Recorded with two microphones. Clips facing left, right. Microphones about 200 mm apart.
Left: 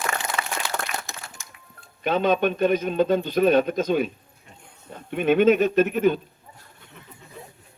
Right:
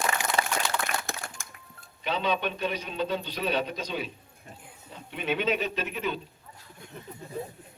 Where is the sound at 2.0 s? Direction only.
50° left (ahead or behind).